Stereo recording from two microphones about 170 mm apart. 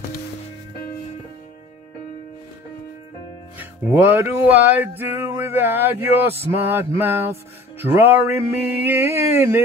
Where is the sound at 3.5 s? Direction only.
10° right (ahead or behind).